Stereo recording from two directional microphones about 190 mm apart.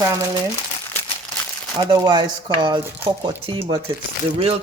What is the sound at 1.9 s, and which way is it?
Speech, 25° right (ahead or behind).